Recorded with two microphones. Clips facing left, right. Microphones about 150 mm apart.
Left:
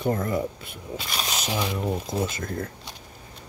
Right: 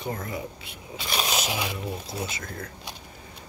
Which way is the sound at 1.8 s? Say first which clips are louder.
Left 6 dB; 50° left (ahead or behind).